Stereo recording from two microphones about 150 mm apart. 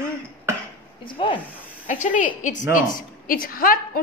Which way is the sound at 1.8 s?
55° left (ahead or behind).